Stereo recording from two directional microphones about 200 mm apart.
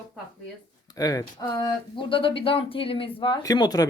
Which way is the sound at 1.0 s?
20° left (ahead or behind).